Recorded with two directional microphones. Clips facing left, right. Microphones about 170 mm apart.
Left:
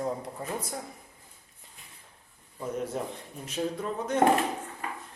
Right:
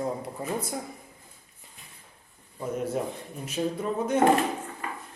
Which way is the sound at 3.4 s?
5° right (ahead or behind).